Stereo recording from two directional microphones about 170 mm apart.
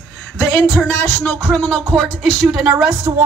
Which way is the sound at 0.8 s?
15° left (ahead or behind).